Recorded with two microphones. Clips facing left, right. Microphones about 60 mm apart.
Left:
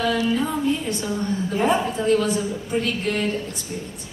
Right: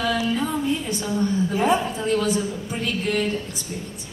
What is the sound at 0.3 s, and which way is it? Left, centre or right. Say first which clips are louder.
A woman's voice: left 1 dB; centre.